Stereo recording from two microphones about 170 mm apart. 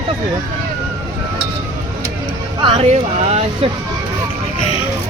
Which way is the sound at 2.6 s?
35° right (ahead or behind).